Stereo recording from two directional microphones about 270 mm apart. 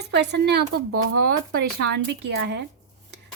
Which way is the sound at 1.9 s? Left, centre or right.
Right.